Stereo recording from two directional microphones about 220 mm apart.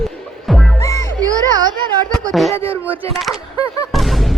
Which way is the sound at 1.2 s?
15° right (ahead or behind).